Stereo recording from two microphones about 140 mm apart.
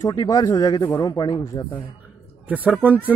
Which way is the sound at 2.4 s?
10° right (ahead or behind).